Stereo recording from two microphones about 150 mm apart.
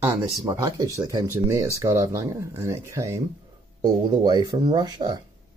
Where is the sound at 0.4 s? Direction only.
20° right (ahead or behind).